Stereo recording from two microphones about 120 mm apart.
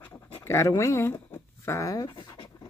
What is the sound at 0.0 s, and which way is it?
Pant, 20° left (ahead or behind).